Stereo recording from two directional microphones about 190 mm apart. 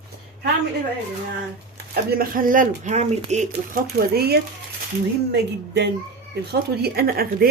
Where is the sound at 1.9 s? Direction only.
50° right (ahead or behind).